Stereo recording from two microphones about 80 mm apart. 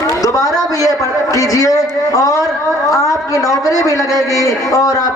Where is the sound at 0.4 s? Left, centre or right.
Right.